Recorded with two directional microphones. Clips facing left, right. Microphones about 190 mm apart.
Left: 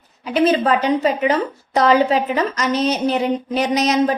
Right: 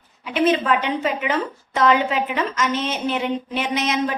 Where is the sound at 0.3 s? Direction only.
35° left (ahead or behind).